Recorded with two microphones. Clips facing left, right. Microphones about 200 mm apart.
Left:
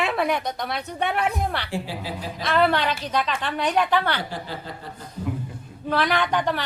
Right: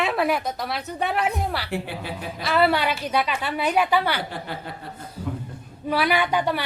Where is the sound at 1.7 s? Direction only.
60° right (ahead or behind).